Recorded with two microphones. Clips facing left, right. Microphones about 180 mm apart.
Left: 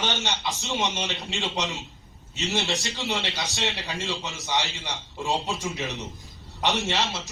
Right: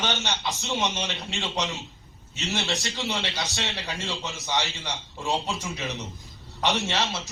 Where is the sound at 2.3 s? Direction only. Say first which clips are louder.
Left 2 dB; 15° left (ahead or behind).